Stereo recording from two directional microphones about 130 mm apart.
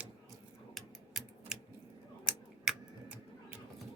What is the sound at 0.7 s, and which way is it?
Typing, centre (ahead or behind).